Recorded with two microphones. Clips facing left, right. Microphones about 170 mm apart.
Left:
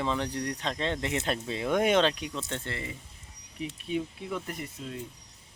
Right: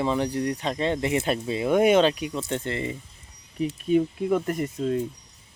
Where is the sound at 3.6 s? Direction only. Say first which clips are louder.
Right 10 dB; 50° right (ahead or behind).